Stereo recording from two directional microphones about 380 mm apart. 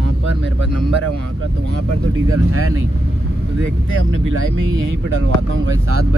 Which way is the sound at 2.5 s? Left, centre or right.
Right.